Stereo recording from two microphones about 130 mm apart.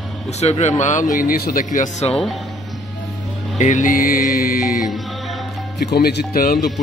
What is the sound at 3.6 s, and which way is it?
Music, 80° left.